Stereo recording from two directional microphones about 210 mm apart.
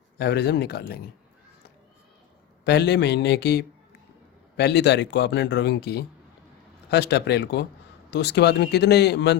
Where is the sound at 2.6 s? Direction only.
50° left (ahead or behind).